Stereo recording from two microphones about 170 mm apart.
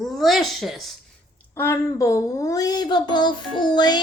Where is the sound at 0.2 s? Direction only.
Centre (ahead or behind).